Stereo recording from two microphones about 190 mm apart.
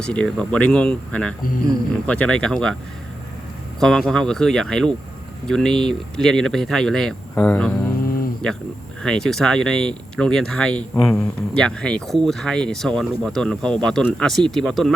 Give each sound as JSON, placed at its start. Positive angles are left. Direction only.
{"t": 0.0, "sound": "speech", "side_deg": 5}
{"t": 3.8, "sound": "speech", "side_deg": 0}
{"t": 7.9, "sound": "a sound", "side_deg": 50}
{"t": 9.0, "sound": "speech", "side_deg": 5}